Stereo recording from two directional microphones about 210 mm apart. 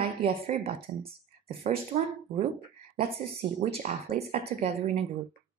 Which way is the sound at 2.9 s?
30° right (ahead or behind).